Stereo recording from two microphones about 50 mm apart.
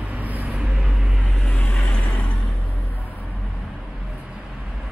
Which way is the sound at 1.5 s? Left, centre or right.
Left.